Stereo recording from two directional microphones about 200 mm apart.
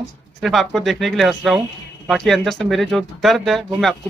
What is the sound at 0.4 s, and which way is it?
Speech, centre (ahead or behind).